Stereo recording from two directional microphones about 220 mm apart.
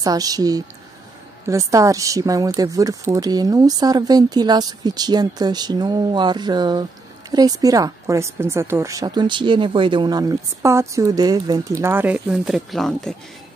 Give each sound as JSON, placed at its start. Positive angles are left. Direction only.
{"t": 0.0, "sound": "a woman's voice", "side_deg": -15}